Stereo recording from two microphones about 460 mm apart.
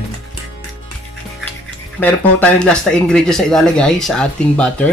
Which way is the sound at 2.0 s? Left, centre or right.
Centre.